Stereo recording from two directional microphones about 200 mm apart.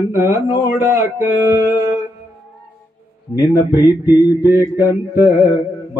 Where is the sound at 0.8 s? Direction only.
15° right (ahead or behind).